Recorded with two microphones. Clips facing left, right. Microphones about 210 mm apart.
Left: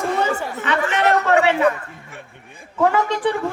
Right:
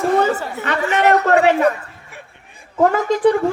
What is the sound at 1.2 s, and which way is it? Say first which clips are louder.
Speech: right 2 dB; 40° right (ahead or behind).